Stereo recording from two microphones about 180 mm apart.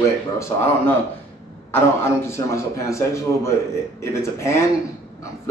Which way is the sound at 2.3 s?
15° left (ahead or behind).